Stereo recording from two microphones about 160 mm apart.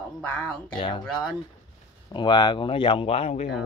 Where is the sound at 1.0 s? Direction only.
5° left (ahead or behind).